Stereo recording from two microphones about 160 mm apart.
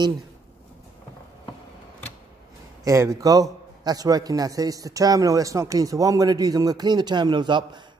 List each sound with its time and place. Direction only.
2.8 s a man's voice: 20° right (ahead or behind)